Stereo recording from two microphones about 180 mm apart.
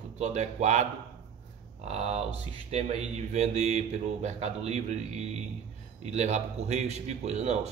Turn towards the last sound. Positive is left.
turn(degrees=-35)  # may be behind; listen again after turning